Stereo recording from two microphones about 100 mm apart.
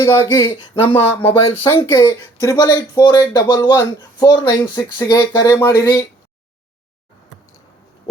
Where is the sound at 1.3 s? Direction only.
70° left (ahead or behind).